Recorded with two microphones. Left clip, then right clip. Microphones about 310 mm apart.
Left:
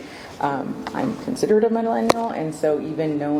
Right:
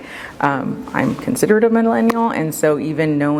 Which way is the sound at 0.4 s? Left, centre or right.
Right.